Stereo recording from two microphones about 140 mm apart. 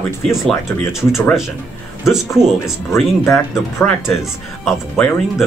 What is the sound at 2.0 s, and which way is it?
Speech, 5° right (ahead or behind).